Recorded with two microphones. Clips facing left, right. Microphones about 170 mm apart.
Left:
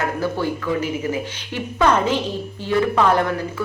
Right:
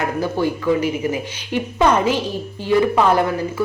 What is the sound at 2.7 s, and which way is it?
Speech, 15° right (ahead or behind).